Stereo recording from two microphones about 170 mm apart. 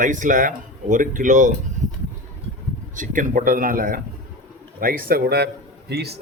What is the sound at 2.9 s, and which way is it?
A man's voice, 50° right (ahead or behind).